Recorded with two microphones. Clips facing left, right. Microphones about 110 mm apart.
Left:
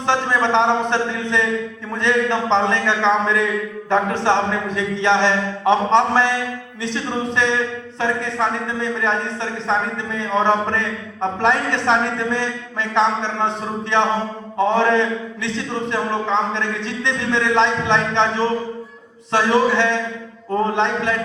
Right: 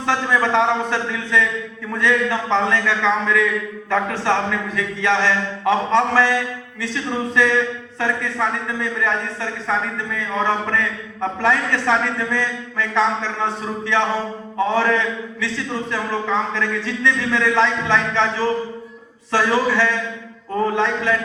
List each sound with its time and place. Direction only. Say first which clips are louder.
0.1 s a man's voice: left 1 dB; 20° left (ahead or behind)
14.6 s a man's voice: left 2 dB; 20° left (ahead or behind)